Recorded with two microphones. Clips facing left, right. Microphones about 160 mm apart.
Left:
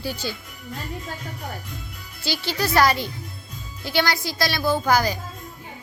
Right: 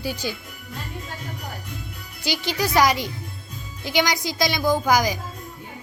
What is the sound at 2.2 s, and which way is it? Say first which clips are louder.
A woman's voice: right 1 dB; 15° right (ahead or behind).